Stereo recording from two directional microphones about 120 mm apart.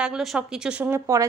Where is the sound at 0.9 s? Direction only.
25° right (ahead or behind).